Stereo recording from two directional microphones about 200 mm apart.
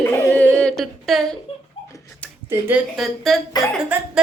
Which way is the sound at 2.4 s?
10° right (ahead or behind).